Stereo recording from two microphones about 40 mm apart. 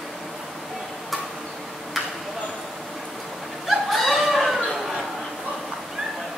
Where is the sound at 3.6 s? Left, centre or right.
Centre.